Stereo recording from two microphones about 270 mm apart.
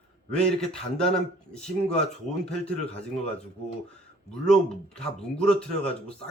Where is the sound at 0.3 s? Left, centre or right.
Centre.